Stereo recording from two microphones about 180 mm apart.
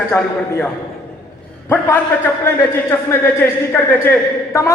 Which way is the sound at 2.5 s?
15° left (ahead or behind).